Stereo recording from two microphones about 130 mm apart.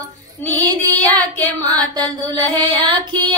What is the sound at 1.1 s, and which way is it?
Music, 30° right (ahead or behind).